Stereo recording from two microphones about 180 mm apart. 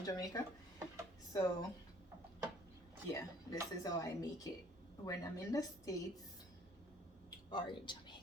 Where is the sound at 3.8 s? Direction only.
20° left (ahead or behind).